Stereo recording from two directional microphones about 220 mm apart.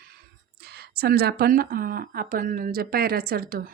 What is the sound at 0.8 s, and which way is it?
Speech, 45° right (ahead or behind).